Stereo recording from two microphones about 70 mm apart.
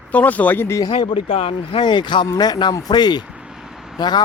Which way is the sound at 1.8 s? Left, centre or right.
Left.